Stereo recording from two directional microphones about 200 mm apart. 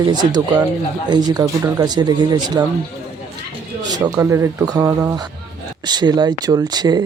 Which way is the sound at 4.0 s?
15° right (ahead or behind).